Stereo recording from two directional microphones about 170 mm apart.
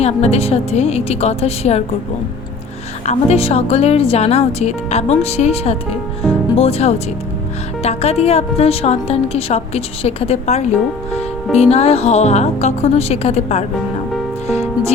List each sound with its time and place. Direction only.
0.0 s speech: 40° left (ahead or behind)
3.1 s speech: 40° left (ahead or behind)
14.4 s music: 40° left (ahead or behind)